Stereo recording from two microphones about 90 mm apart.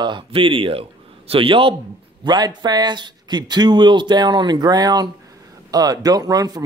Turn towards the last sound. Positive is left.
turn(degrees=-45)  # may be behind; listen again after turning